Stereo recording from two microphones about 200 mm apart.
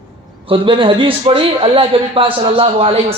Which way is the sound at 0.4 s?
25° right (ahead or behind).